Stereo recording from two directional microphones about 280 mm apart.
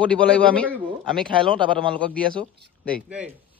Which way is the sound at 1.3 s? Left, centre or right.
Centre.